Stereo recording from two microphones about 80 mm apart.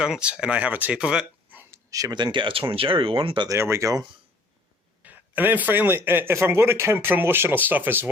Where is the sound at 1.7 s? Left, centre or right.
Right.